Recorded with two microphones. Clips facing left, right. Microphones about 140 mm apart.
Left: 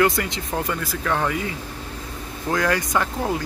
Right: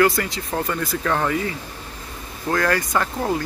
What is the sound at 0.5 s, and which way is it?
Speech, 10° left (ahead or behind).